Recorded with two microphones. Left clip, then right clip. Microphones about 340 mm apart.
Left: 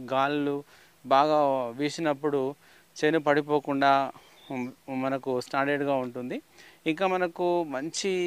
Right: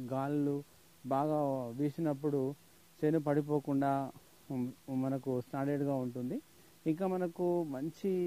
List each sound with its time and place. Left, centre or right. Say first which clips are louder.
0.0 s speech: left 9 dB; centre
7.4 s speech: left 5 dB; left
7.7 s speech: left 7 dB; centre